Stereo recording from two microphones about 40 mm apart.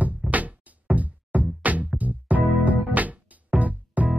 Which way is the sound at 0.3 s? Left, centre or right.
Right.